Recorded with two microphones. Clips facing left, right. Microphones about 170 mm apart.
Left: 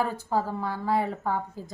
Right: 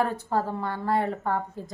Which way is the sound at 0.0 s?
Centre (ahead or behind).